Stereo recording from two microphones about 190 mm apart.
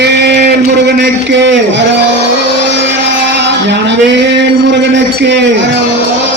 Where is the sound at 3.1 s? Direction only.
70° right (ahead or behind).